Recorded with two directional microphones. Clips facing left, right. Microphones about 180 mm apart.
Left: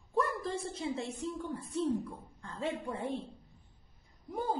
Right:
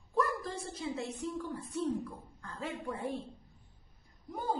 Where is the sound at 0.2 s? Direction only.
25° left (ahead or behind).